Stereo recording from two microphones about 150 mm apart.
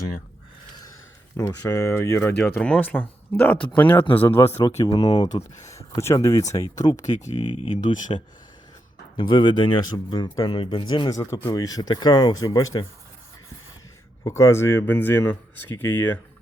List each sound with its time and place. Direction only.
1.4 s speech: 20° left (ahead or behind)
6.9 s speech: 55° left (ahead or behind); by 12.8 s 25° left (ahead or behind)
14.3 s speech: 20° left (ahead or behind)